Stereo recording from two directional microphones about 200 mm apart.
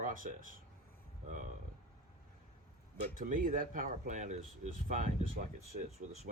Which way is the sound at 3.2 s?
40° right (ahead or behind).